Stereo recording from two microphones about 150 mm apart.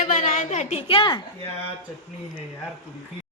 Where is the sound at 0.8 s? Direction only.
35° left (ahead or behind).